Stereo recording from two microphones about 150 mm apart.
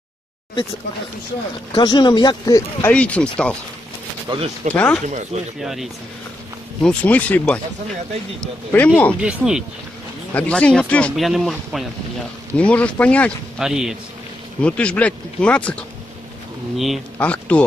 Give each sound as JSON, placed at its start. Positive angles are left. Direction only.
{"t": 1.7, "sound": "speech", "side_deg": 30}
{"t": 2.9, "sound": "speech", "side_deg": 10}
{"t": 4.3, "sound": "speech", "side_deg": -30}
{"t": 4.7, "sound": "speech", "side_deg": 10}
{"t": 5.0, "sound": "speech", "side_deg": -55}
{"t": 5.6, "sound": "speech", "side_deg": 0}
{"t": 6.8, "sound": "speech", "side_deg": 10}
{"t": 9.2, "sound": "speech", "side_deg": -5}
{"t": 10.3, "sound": "speech", "side_deg": 10}
{"t": 13.6, "sound": "speech", "side_deg": -5}
{"t": 14.6, "sound": "speech", "side_deg": 10}
{"t": 17.2, "sound": "speech", "side_deg": 10}